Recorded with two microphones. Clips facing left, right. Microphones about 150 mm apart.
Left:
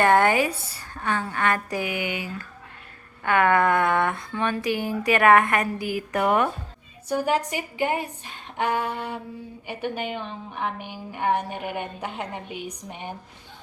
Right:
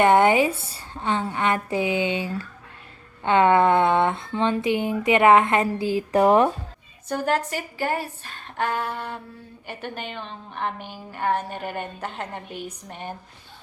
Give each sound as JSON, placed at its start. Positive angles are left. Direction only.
{"t": 0.0, "sound": "speech", "side_deg": -20}
{"t": 7.1, "sound": "a woman's voice", "side_deg": 10}